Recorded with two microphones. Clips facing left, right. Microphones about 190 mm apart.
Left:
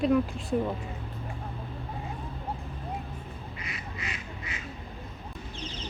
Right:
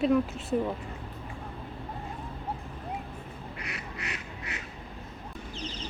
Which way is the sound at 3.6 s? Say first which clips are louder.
Right 1 dB; 70° right (ahead or behind).